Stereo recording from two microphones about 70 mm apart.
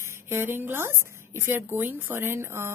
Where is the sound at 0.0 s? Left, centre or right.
Right.